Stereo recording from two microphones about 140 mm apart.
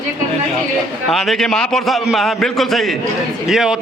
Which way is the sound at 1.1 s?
Centre (ahead or behind).